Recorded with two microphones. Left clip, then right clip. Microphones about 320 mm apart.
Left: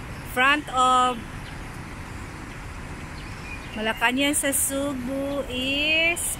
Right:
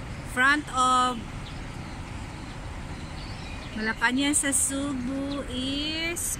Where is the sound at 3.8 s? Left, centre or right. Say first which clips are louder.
Left 3 dB; centre.